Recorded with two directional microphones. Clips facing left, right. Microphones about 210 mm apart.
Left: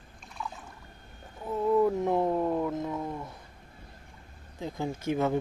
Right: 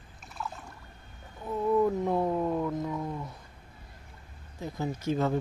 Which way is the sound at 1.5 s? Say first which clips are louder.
Left 1 dB; 10° left (ahead or behind).